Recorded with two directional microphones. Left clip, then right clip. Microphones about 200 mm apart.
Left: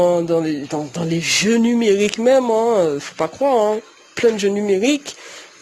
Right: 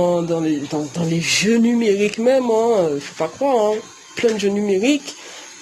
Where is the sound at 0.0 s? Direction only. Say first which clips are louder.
Left 2 dB; 50° left (ahead or behind).